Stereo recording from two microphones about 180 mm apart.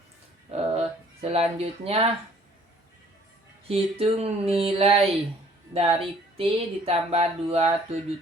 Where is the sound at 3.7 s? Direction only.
35° right (ahead or behind).